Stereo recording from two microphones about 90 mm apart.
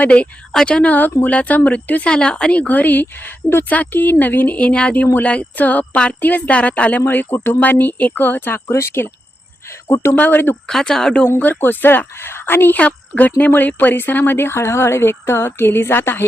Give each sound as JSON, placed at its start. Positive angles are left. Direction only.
{"t": 0.0, "sound": "speech", "side_deg": 15}
{"t": 10.7, "sound": "speech", "side_deg": 5}
{"t": 11.3, "sound": "speech", "side_deg": 20}